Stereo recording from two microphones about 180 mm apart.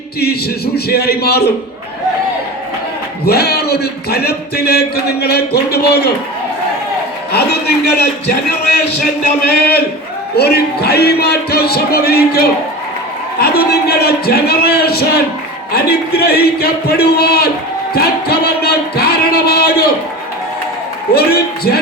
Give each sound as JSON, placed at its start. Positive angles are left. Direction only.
{"t": 0.2, "sound": "speech", "side_deg": 60}
{"t": 3.2, "sound": "speech", "side_deg": 60}
{"t": 7.3, "sound": "speech", "side_deg": 65}
{"t": 17.9, "sound": "music", "side_deg": 60}
{"t": 21.1, "sound": "speech", "side_deg": 60}